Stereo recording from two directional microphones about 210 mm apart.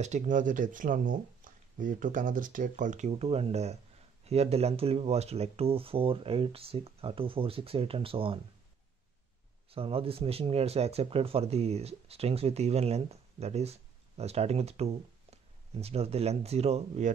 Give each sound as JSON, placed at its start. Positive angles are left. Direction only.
{"t": 0.0, "sound": "speech", "side_deg": -35}
{"t": 9.7, "sound": "speech", "side_deg": -25}